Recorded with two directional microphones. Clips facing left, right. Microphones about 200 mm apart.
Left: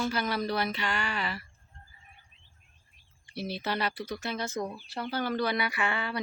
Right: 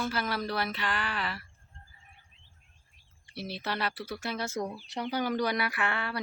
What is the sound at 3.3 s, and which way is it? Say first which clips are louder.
Speech: left 3 dB; centre (ahead or behind).